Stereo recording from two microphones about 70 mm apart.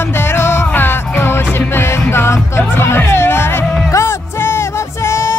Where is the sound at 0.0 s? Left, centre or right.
Left.